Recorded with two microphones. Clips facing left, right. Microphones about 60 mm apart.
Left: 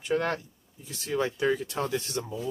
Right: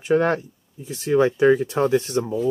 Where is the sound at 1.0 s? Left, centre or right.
Right.